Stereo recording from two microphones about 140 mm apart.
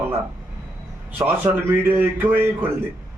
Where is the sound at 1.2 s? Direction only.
15° right (ahead or behind).